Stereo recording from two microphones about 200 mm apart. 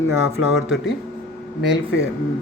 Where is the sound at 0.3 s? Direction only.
70° left (ahead or behind).